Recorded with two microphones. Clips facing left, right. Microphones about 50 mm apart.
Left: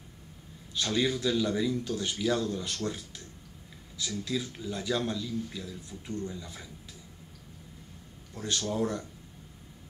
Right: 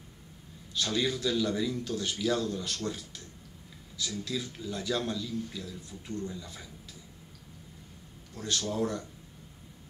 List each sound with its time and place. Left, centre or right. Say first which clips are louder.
0.7 s a man's voice: left 2 dB; centre
2.4 s speech: left 1 dB; centre
2.8 s a man's voice: left 1 dB; centre
4.2 s a man's voice: left 4 dB; centre
8.4 s a man's voice: left 1 dB; centre